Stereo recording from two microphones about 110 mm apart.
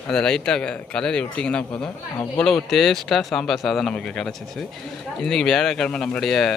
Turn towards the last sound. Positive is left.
turn(degrees=5)  # may be behind; listen again after turning